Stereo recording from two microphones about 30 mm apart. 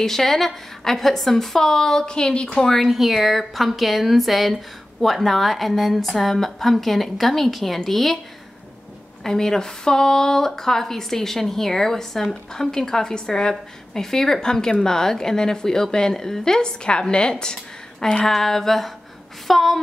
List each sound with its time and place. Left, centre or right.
0.0 s speech: centre
2.0 s a woman's voice: left
2.8 s a woman's voice: centre
9.2 s a woman's voice: centre
18.2 s a woman's voice: centre